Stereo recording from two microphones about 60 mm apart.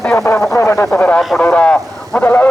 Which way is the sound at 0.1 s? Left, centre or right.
Left.